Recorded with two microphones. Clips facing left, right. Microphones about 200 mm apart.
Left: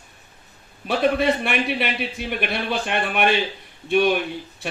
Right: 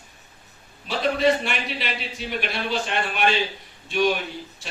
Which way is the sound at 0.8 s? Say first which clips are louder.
Left 2 dB; 55° left (ahead or behind).